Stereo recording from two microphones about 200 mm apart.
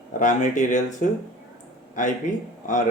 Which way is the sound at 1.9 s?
40° left (ahead or behind).